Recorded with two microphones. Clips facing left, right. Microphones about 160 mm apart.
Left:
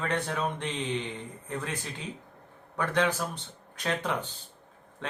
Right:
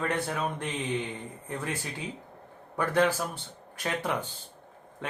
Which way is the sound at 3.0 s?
5° right (ahead or behind).